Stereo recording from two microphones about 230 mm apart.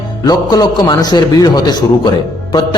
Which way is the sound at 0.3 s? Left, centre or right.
Centre.